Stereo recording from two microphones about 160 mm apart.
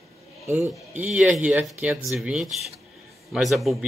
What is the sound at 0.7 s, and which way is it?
Speech, 10° right (ahead or behind).